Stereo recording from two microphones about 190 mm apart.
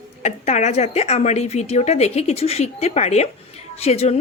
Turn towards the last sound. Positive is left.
turn(degrees=35)  # may be behind; listen again after turning